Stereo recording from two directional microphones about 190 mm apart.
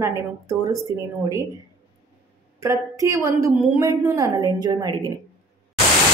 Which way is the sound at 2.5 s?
15° right (ahead or behind).